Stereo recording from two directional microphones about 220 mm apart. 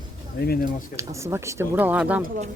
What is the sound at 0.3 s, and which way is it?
Speech, 45° left (ahead or behind).